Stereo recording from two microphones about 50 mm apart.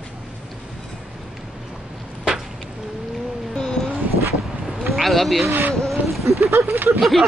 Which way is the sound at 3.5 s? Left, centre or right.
Centre.